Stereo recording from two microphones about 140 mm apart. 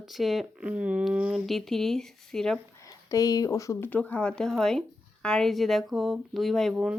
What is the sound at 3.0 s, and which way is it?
Speech, 25° left (ahead or behind).